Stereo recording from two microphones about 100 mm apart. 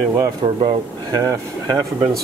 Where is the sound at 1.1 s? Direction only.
35° right (ahead or behind).